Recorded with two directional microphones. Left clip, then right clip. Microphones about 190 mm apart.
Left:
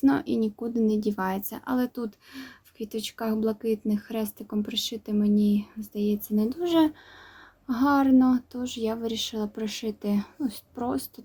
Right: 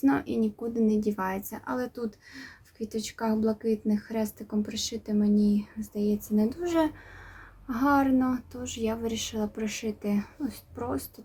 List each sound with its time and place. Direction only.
0.0 s speech: 30° left (ahead or behind)